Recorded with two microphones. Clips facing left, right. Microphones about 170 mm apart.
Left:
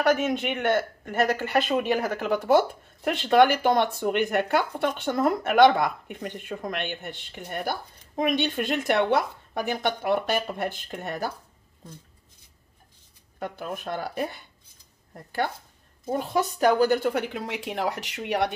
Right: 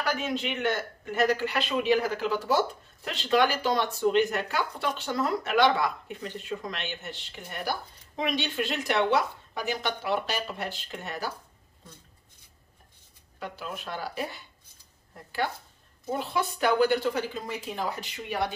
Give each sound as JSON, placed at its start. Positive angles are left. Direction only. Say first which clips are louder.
{"t": 0.0, "sound": "speech", "louder": "left 7 dB", "side_deg": 50}
{"t": 13.4, "sound": "speech", "louder": "left 4 dB", "side_deg": 50}
{"t": 16.1, "sound": "a woman's voice", "louder": "left 4 dB", "side_deg": 45}